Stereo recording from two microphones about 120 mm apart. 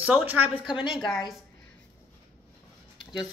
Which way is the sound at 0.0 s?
10° right (ahead or behind).